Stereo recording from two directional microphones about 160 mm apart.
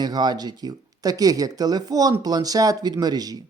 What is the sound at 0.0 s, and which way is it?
Speech, 25° right (ahead or behind).